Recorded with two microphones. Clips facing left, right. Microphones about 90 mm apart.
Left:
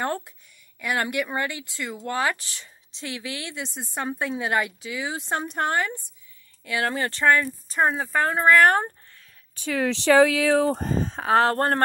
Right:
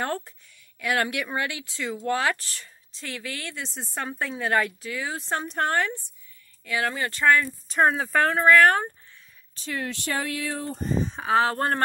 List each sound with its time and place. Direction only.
0.7 s speech: 5° left (ahead or behind)
2.3 s speech: 20° left (ahead or behind)
6.6 s speech: 25° left (ahead or behind)
7.7 s speech: centre (ahead or behind)
8.5 s speech: 30° left (ahead or behind)
9.7 s speech: 90° left
11.1 s speech: 50° left (ahead or behind)